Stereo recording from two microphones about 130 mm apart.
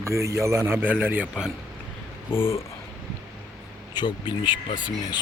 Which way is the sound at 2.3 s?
15° left (ahead or behind).